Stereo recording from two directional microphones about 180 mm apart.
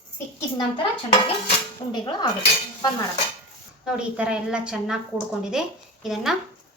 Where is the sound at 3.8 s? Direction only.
5° right (ahead or behind).